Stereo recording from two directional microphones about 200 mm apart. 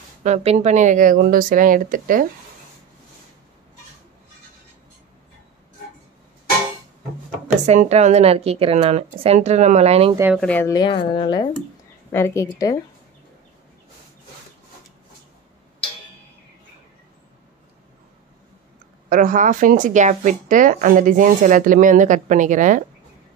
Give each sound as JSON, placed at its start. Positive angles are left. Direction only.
{"t": 0.2, "sound": "speech", "side_deg": -35}
{"t": 7.6, "sound": "speech", "side_deg": -35}
{"t": 10.3, "sound": "a woman's voice", "side_deg": 5}
{"t": 10.7, "sound": "speech", "side_deg": 25}
{"t": 12.1, "sound": "a woman's voice", "side_deg": 15}
{"t": 19.0, "sound": "speech", "side_deg": -40}